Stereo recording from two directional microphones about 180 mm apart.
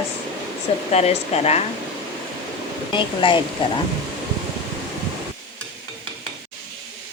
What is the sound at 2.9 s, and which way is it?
Speech, 25° left (ahead or behind).